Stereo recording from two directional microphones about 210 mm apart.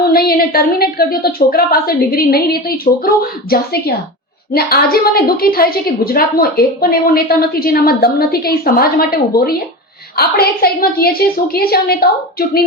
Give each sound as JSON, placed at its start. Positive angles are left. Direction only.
{"t": 0.0, "sound": "a woman's voice", "side_deg": 45}